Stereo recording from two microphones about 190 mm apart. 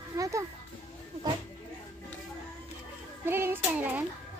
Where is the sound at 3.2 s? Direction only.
10° right (ahead or behind).